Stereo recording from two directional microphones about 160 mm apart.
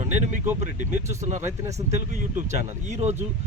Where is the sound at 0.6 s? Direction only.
50° right (ahead or behind).